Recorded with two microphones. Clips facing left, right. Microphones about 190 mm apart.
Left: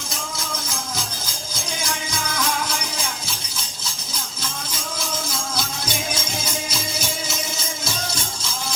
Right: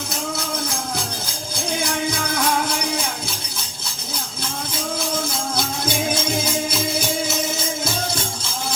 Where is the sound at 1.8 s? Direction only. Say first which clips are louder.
Right 5 dB; 60° right (ahead or behind).